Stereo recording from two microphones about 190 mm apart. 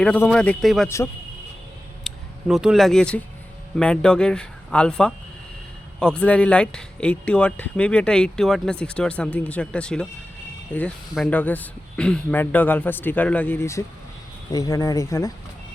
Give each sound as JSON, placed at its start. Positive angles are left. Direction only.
{"t": 0.0, "sound": "speech", "side_deg": 5}
{"t": 2.0, "sound": "speech", "side_deg": -5}